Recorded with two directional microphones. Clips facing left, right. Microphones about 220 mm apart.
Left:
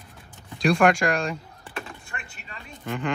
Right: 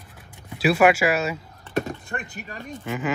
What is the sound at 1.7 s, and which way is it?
Speech, 40° right (ahead or behind).